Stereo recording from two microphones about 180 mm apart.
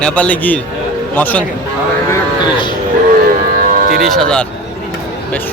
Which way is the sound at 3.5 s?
50° right (ahead or behind).